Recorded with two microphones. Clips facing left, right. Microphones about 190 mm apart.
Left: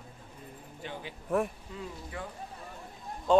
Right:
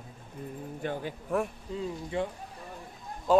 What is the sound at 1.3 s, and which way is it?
Speech, centre (ahead or behind).